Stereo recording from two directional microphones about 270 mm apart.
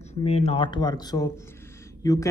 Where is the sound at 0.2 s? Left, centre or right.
Left.